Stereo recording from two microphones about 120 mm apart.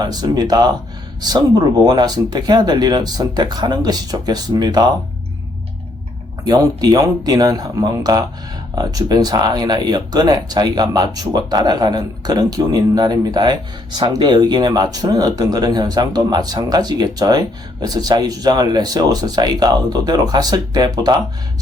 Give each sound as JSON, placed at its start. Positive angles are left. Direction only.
{"t": 0.0, "sound": "speech", "side_deg": -35}
{"t": 6.4, "sound": "speech", "side_deg": -35}